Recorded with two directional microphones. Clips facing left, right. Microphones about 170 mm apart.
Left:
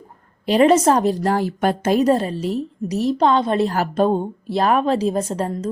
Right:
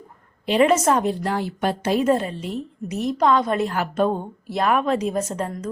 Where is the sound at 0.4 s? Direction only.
40° left (ahead or behind).